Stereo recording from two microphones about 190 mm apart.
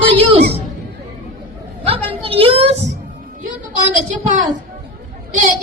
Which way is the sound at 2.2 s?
30° right (ahead or behind).